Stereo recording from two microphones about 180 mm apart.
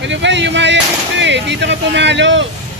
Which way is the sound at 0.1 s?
80° right.